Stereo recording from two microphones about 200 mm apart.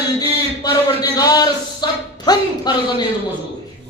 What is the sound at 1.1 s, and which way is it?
Speech, 20° left (ahead or behind).